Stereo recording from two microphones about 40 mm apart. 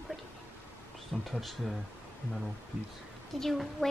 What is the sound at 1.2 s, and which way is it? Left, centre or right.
Speech, centre.